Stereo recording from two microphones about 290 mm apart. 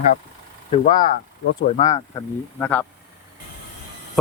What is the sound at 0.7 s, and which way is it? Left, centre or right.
Speech, centre.